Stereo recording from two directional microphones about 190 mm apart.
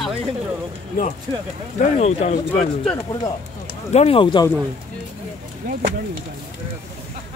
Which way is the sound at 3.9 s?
30° left (ahead or behind).